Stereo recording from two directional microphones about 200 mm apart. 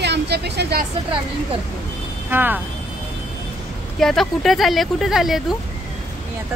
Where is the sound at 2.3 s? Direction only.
10° right (ahead or behind).